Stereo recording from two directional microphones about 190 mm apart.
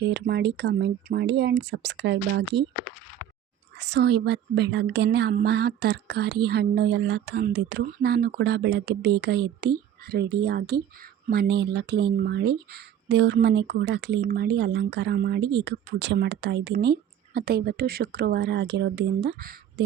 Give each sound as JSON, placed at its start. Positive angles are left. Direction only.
{"t": 0.0, "sound": "speech", "side_deg": -60}
{"t": 3.8, "sound": "speech", "side_deg": -65}